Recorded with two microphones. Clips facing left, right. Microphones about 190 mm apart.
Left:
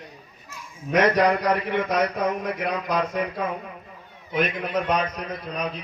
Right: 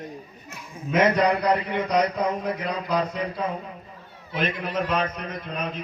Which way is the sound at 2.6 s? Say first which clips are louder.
Left 2 dB; 60° left (ahead or behind).